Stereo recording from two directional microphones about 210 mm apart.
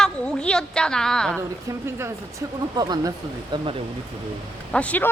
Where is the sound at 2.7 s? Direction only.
20° right (ahead or behind).